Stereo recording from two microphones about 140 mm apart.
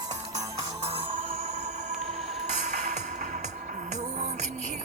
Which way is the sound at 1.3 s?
50° right (ahead or behind).